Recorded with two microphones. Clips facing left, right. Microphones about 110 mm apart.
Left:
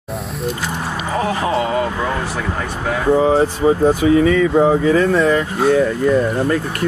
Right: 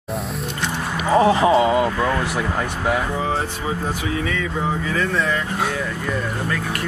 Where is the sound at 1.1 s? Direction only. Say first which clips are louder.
Right 5 dB; 25° right (ahead or behind).